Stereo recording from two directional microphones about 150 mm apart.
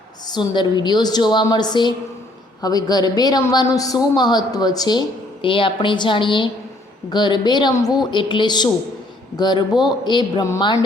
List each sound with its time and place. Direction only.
0.3 s a man's voice: 30° left (ahead or behind)